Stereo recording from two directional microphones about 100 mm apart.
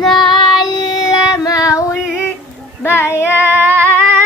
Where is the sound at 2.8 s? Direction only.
25° left (ahead or behind).